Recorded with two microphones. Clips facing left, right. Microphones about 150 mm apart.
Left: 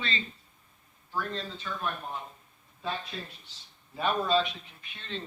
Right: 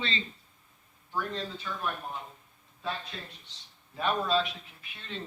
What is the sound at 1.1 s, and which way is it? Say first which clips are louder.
Speech: even; 15° right (ahead or behind).